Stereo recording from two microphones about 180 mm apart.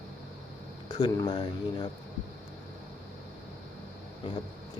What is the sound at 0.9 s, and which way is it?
Speech, 20° left (ahead or behind).